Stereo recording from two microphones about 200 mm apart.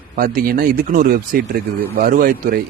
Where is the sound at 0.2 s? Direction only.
45° right (ahead or behind).